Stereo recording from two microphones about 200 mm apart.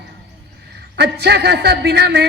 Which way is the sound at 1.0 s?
55° right (ahead or behind).